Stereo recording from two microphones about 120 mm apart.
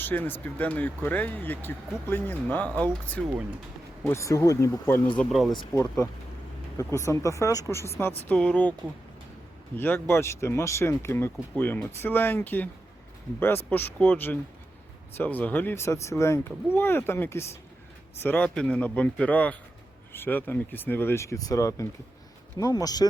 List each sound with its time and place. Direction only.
0.0 s speech: 15° left (ahead or behind)
4.0 s speech: 25° left (ahead or behind)
5.3 s speech: centre (ahead or behind)
5.7 s speech: 25° left (ahead or behind)
8.3 s speech: 10° left (ahead or behind)
9.7 s speech: 15° left (ahead or behind); by 23.0 s 30° left (ahead or behind)